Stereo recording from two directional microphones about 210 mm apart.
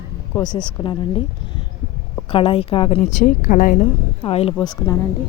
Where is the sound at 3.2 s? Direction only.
40° left (ahead or behind).